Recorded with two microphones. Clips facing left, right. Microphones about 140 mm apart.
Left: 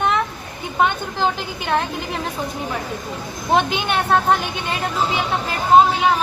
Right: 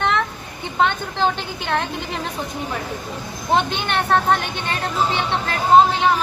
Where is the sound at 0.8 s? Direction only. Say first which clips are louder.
Even; 5° left (ahead or behind).